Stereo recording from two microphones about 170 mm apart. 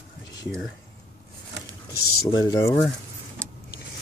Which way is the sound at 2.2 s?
20° left (ahead or behind).